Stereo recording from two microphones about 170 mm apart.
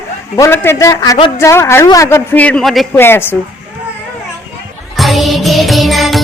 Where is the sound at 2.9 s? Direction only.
15° left (ahead or behind).